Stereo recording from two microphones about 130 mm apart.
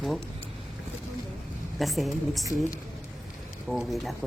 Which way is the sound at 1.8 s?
Centre (ahead or behind).